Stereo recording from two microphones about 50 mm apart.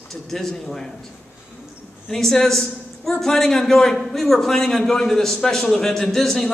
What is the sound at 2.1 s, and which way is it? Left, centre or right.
A man's voice, centre.